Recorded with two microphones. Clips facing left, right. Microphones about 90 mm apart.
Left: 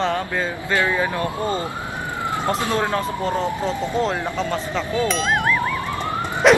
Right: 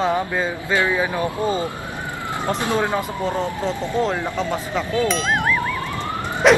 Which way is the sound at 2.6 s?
20° right (ahead or behind).